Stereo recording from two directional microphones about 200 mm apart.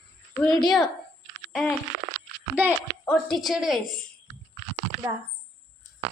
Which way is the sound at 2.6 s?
10° right (ahead or behind).